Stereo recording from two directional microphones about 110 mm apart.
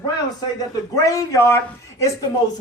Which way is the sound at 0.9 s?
30° left (ahead or behind).